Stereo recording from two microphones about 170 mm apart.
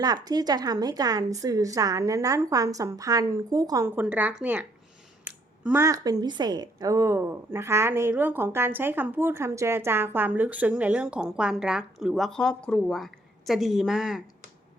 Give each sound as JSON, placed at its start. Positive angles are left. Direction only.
{"t": 0.0, "sound": "a woman's voice", "side_deg": -25}